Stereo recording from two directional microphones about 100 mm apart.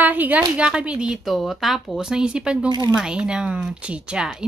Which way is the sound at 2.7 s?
45° right (ahead or behind).